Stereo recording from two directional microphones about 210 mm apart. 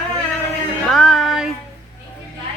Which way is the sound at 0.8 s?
Centre (ahead or behind).